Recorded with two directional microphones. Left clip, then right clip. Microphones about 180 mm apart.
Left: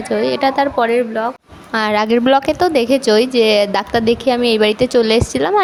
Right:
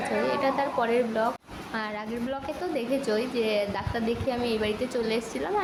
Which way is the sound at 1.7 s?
65° left (ahead or behind).